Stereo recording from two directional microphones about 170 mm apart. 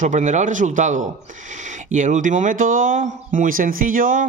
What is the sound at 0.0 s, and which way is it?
Speech, 45° right (ahead or behind).